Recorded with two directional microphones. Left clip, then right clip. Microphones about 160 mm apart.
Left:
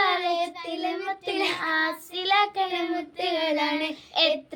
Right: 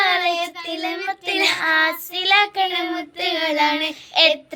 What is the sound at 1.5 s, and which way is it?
Child singing, 15° right (ahead or behind).